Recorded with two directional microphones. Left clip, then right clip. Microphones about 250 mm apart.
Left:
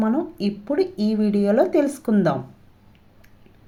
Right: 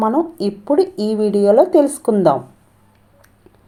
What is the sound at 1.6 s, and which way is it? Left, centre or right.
Speech, centre.